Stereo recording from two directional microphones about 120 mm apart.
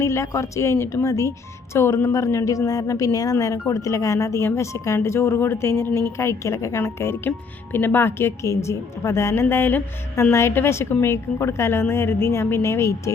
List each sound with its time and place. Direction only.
0.0 s speech: 25° left (ahead or behind)